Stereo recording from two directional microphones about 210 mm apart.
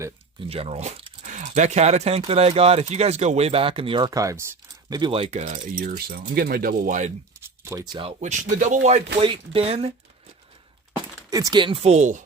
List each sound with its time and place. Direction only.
0.4 s speech: 30° right (ahead or behind)
7.6 s speech: 15° right (ahead or behind)
7.9 s speech: 30° right (ahead or behind)
11.5 s speech: 25° right (ahead or behind)